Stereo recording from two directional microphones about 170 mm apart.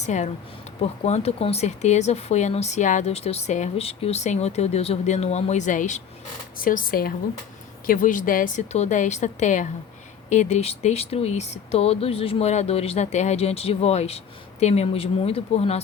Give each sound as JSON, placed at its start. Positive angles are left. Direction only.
{"t": 0.0, "sound": "a woman's voice", "side_deg": 45}